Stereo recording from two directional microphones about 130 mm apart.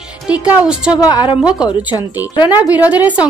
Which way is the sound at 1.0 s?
35° left (ahead or behind).